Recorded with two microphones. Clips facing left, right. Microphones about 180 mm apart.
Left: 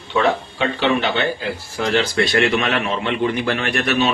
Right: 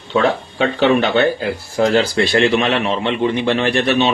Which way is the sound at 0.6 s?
45° right (ahead or behind).